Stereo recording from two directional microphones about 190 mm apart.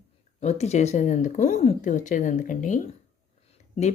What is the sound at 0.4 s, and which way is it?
Speech, 35° left (ahead or behind).